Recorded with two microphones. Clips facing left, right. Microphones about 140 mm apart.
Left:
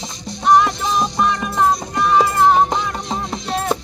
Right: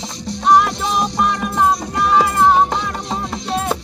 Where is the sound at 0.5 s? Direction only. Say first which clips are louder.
Even; 5° right (ahead or behind).